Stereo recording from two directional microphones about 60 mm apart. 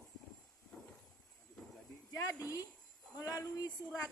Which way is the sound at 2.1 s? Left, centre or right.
Left.